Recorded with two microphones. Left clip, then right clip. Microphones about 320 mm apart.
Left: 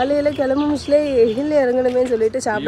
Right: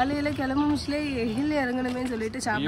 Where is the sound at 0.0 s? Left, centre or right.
Centre.